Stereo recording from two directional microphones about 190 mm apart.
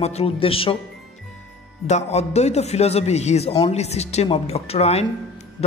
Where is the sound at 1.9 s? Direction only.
35° left (ahead or behind).